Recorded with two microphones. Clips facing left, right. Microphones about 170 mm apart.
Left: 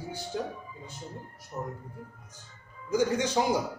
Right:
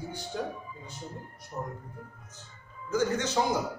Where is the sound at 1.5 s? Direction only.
10° right (ahead or behind).